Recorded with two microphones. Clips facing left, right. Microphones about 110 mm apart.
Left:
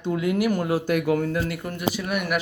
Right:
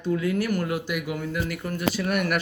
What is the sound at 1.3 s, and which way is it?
Speech, 25° left (ahead or behind).